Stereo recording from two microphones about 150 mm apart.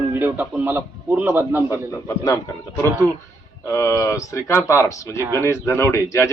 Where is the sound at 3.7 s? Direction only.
20° left (ahead or behind).